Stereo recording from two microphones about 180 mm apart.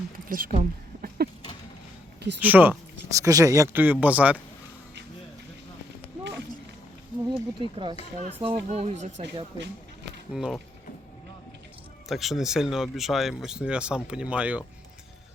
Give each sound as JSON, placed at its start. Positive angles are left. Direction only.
{"t": 0.3, "sound": "speech", "side_deg": -50}
{"t": 0.5, "sound": "a sound", "side_deg": -50}
{"t": 2.4, "sound": "speech", "side_deg": -10}
{"t": 7.3, "sound": "speech", "side_deg": -25}
{"t": 10.3, "sound": "speech", "side_deg": 0}
{"t": 12.0, "sound": "speech", "side_deg": 0}